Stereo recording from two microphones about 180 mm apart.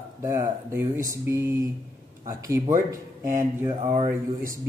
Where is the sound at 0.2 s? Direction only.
15° right (ahead or behind).